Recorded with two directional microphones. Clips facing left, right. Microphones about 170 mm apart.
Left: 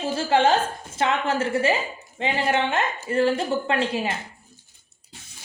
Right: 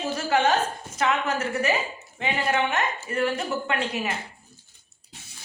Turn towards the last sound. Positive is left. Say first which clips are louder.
# left 4 dB
turn(degrees=30)  # may be behind; listen again after turning